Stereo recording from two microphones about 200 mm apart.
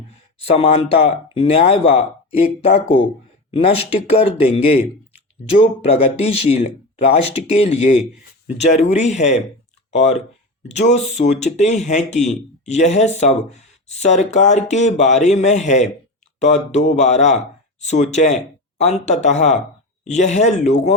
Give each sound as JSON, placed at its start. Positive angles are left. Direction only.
{"t": 0.3, "sound": "speech", "side_deg": 30}